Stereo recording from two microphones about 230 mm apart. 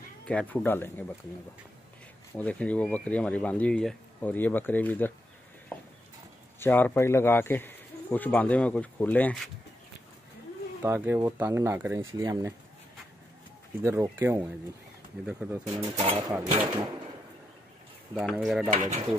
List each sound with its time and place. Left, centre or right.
0.3 s speech: centre
2.3 s speech: centre
6.6 s speech: centre
10.8 s speech: centre
13.8 s speech: centre
15.7 s speech: centre
18.1 s speech: centre
18.7 s speech: right